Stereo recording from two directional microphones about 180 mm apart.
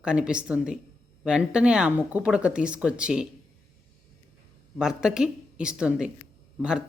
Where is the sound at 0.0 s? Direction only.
5° right (ahead or behind).